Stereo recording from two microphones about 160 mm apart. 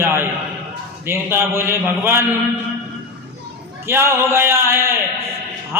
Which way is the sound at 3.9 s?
15° right (ahead or behind).